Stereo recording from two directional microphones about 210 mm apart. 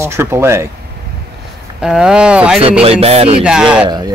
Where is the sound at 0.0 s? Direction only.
10° right (ahead or behind).